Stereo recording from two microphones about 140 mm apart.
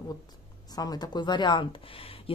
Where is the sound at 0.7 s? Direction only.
30° left (ahead or behind).